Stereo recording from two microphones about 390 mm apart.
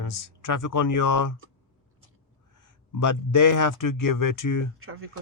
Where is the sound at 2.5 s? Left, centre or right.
Left.